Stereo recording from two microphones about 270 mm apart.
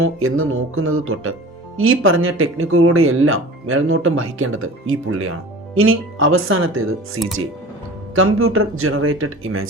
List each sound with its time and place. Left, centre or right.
0.0 s speech: right
8.1 s speech: right